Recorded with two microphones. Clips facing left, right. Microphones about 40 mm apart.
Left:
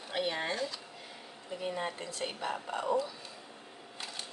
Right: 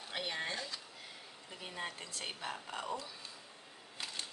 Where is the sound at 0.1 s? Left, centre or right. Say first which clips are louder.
Left 6 dB; centre.